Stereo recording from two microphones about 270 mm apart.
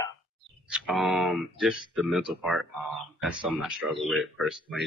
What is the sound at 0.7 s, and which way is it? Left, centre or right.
Speech, centre.